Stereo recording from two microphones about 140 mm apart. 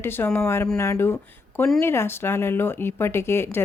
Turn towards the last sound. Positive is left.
turn(degrees=15)  # may be behind; listen again after turning